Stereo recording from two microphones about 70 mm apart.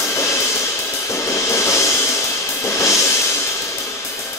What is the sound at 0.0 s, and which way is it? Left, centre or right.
Music, left.